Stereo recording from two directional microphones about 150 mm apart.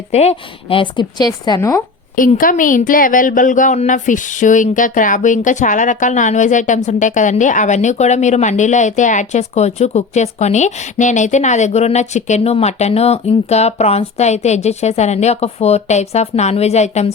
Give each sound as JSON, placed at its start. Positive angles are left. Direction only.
{"t": 0.1, "sound": "speech", "side_deg": 45}
{"t": 2.1, "sound": "a woman's voice", "side_deg": 65}